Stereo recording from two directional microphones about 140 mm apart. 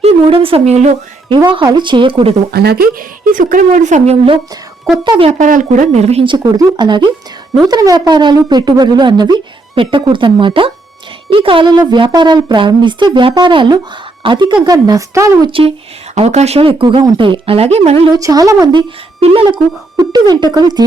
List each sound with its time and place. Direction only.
0.0 s a woman's voice: 40° right (ahead or behind)
1.5 s speech: 35° right (ahead or behind)
2.5 s speech: 90° right
3.3 s speech: 70° right (ahead or behind); by 4.4 s 50° right (ahead or behind)
5.0 s speech: 35° right (ahead or behind)
5.3 s speech: 65° right (ahead or behind)
6.2 s speech: 30° right (ahead or behind)
16.1 s speech: 50° right (ahead or behind)
18.1 s speech: 25° right (ahead or behind)
19.2 s speech: 40° right (ahead or behind)
20.0 s speech: 30° right (ahead or behind)